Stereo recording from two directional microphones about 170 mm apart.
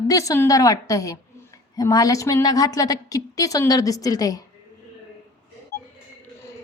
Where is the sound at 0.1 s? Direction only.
20° left (ahead or behind).